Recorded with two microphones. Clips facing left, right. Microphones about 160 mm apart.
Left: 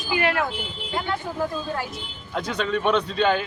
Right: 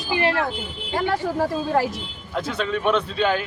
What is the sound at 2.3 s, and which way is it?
A man's voice, centre (ahead or behind).